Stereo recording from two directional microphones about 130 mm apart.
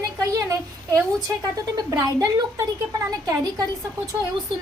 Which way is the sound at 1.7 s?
30° right (ahead or behind).